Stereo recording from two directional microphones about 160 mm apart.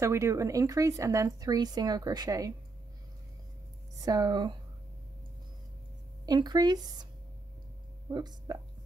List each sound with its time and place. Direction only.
0.0 s a woman's voice: 20° right (ahead or behind)
4.0 s a woman's voice: 25° right (ahead or behind)
6.2 s a woman's voice: 25° right (ahead or behind)
8.1 s a woman's voice: 25° right (ahead or behind)